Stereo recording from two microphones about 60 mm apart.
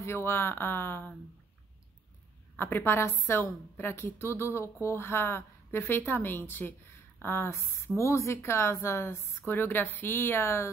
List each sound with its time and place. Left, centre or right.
0.0 s a woman's voice: left
2.5 s a woman's voice: left